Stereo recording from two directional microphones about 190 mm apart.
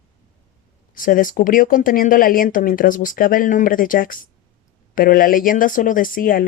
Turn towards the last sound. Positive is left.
turn(degrees=50)  # may be behind; listen again after turning